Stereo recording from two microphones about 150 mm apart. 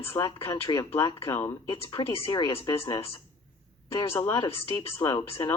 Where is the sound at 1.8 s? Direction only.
35° left (ahead or behind).